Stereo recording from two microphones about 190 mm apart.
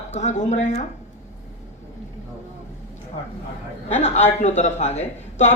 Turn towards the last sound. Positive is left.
turn(degrees=35)  # may be behind; listen again after turning